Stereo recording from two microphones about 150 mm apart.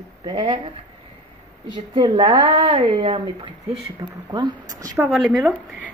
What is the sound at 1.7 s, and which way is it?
Speech, 30° right (ahead or behind).